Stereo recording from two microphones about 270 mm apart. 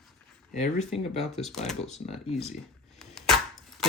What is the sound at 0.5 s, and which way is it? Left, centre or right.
Speech, left.